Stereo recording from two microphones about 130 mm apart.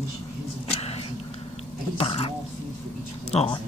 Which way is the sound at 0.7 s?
50° left (ahead or behind).